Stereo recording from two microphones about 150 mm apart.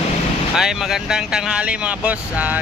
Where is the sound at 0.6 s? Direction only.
5° right (ahead or behind).